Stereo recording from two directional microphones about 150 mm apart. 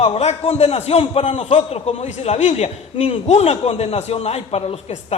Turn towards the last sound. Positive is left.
turn(degrees=45)  # may be behind; listen again after turning